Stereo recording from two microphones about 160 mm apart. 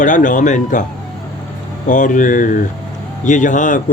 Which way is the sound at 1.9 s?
50° left (ahead or behind).